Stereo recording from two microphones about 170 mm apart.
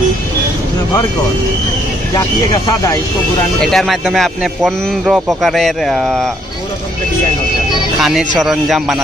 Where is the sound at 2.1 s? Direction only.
25° left (ahead or behind).